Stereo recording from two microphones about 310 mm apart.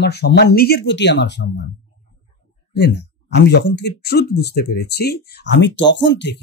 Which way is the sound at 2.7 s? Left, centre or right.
Left.